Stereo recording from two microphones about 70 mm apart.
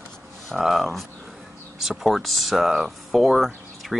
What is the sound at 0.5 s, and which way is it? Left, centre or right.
Speech, centre.